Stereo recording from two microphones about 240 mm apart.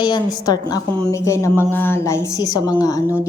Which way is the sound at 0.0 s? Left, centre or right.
Centre.